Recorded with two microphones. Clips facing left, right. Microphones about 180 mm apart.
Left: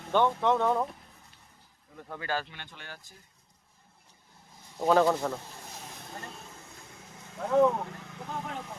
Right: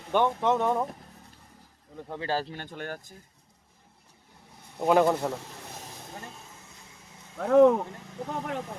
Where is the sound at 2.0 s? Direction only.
25° right (ahead or behind); by 3.0 s 50° right (ahead or behind).